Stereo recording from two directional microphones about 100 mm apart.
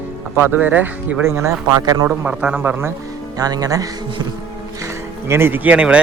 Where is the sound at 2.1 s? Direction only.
15° right (ahead or behind).